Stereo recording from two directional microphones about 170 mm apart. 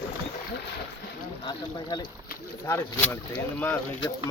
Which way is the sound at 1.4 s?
25° left (ahead or behind).